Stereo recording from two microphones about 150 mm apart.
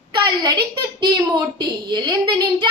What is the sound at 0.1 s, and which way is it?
A woman's voice, 30° right (ahead or behind).